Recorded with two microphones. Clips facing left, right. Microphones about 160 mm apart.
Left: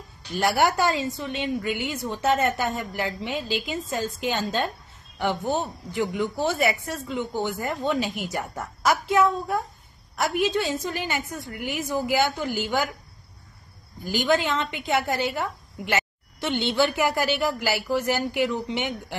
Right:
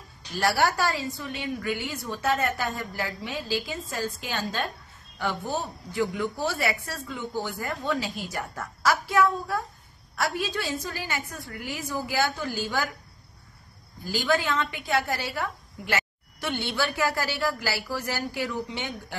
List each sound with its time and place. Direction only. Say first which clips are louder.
0.4 s a woman's voice: left 3 dB; 20° left (ahead or behind)
14.0 s a woman's voice: left 3 dB; 20° left (ahead or behind)